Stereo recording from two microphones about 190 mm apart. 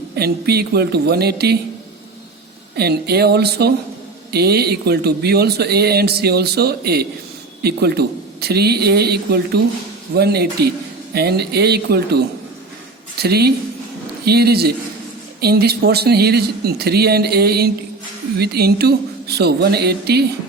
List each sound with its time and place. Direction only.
0.2 s speech: 55° right (ahead or behind)
2.7 s speech: 55° right (ahead or behind)